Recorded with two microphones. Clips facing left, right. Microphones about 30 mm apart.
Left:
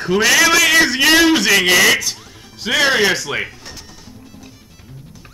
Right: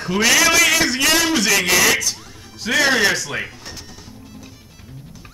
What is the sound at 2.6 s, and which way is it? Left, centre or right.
Speech, centre.